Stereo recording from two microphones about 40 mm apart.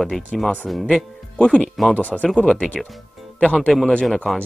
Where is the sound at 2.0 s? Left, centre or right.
Left.